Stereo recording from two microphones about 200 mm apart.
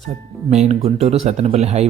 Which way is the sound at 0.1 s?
35° right (ahead or behind).